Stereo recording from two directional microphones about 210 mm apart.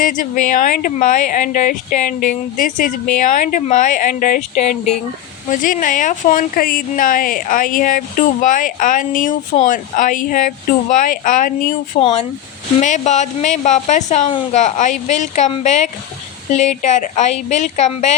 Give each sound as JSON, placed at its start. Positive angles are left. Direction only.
{"t": 0.0, "sound": "a woman's voice", "side_deg": 40}
{"t": 11.9, "sound": "a woman's voice", "side_deg": 25}